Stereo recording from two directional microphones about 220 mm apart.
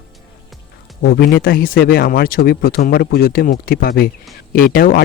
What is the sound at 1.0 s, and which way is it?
Speech, 50° left (ahead or behind).